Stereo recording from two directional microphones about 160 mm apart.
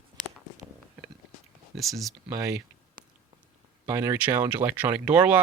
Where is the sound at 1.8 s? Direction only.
Centre (ahead or behind).